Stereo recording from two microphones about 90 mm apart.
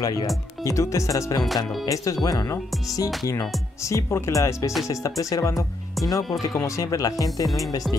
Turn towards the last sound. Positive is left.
turn(degrees=40)  # may be behind; listen again after turning